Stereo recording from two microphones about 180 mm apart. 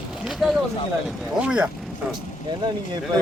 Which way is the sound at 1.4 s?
5° right (ahead or behind).